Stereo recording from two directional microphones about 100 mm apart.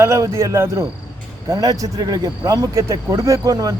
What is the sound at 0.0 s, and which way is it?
Speech, 30° right (ahead or behind).